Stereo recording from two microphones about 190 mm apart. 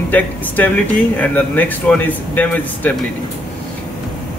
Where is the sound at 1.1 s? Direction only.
10° left (ahead or behind).